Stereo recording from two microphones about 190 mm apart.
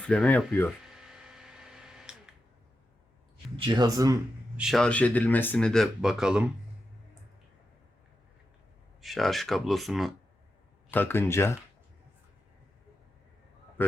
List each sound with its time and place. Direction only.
0.0 s speech: 5° left (ahead or behind)
0.9 s a sound: 5° right (ahead or behind)
3.7 s speech: 20° right (ahead or behind)
4.5 s speech: centre (ahead or behind)
9.0 s speech: centre (ahead or behind)
10.9 s speech: 10° left (ahead or behind)
13.8 s speech: 10° left (ahead or behind)